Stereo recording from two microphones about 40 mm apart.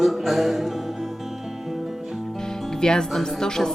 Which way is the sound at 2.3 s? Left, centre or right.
Centre.